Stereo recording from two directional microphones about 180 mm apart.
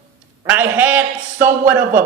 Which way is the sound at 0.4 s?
10° right (ahead or behind).